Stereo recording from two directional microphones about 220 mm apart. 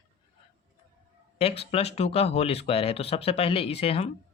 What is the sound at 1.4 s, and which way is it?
Speech, 25° left (ahead or behind).